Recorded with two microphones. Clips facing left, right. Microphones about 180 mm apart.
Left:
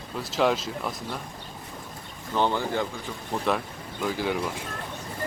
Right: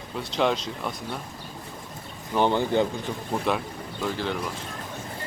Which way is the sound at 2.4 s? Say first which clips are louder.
Right 4 dB; 20° right (ahead or behind).